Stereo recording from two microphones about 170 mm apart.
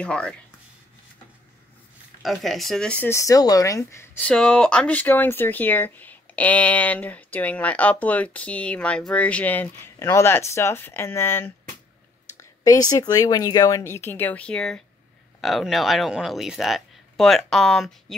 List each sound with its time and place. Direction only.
0.0 s speech: 5° left (ahead or behind)
2.2 s speech: centre (ahead or behind)